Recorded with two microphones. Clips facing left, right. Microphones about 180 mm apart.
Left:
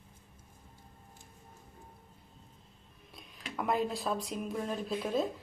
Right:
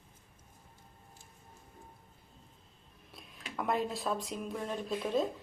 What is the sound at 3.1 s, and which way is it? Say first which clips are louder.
Speech: left 2 dB; centre (ahead or behind).